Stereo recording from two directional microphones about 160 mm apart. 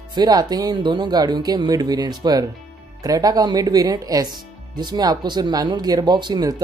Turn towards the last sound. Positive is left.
turn(degrees=-25)  # may be behind; listen again after turning